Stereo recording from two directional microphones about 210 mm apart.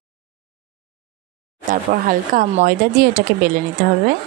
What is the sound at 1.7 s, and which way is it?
Speech, 40° right (ahead or behind).